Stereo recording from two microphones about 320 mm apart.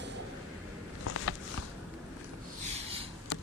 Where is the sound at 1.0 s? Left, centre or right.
Left.